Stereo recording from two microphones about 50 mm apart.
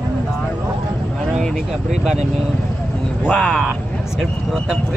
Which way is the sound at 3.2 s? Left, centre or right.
Centre.